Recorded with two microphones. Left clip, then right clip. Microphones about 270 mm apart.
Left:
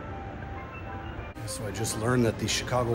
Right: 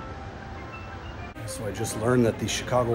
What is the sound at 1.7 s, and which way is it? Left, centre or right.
Speech, centre.